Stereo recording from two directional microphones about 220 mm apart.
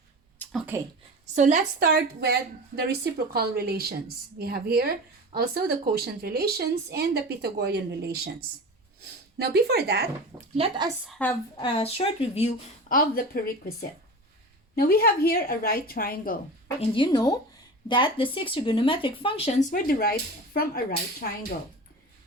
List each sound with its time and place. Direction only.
0.4 s a sound: 10° left (ahead or behind)
1.4 s a woman's voice: 35° right (ahead or behind)
10.6 s a woman's voice: 20° right (ahead or behind)
11.2 s a woman's voice: 5° left (ahead or behind)
11.5 s speech: 25° left (ahead or behind)
12.9 s a woman's voice: 40° left (ahead or behind)
16.9 s speech: 20° left (ahead or behind); by 20.8 s 45° left (ahead or behind)